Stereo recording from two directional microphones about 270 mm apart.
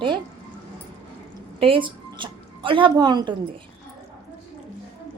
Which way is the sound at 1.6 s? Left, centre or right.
Centre.